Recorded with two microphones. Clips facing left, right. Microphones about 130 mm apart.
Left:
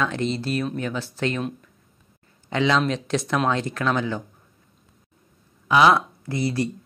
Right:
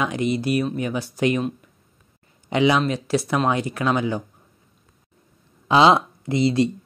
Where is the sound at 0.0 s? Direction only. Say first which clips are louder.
Right 2 dB; 10° right (ahead or behind).